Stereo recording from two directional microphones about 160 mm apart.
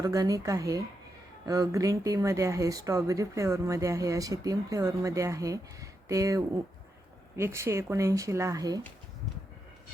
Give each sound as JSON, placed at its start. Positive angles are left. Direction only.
{"t": 0.0, "sound": "speech", "side_deg": -20}